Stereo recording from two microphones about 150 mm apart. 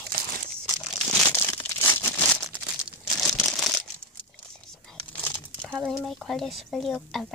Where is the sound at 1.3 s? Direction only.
15° left (ahead or behind).